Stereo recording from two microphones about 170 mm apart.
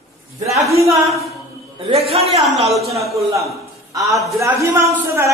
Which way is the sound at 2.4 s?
Centre (ahead or behind).